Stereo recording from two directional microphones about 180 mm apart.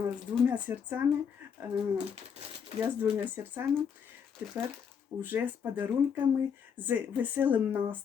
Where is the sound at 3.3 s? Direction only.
10° right (ahead or behind).